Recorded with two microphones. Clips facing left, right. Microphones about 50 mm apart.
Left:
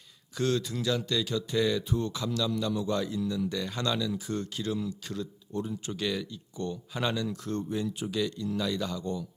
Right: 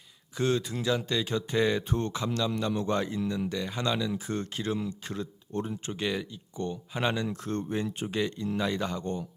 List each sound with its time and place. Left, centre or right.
0.3 s speech: right
2.1 s speech: right
3.6 s speech: right
5.9 s speech: right